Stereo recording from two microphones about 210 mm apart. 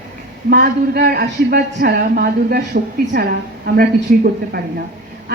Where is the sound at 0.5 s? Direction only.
45° right (ahead or behind).